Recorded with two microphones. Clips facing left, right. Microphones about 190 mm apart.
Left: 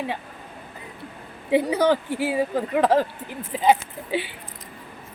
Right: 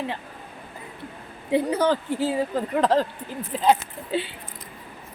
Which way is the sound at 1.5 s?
10° left (ahead or behind).